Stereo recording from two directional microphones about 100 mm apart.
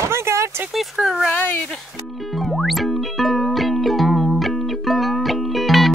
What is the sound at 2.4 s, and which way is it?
Music, centre (ahead or behind).